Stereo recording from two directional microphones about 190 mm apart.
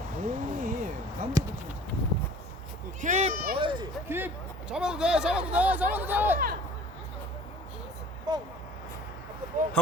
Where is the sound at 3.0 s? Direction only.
40° right (ahead or behind).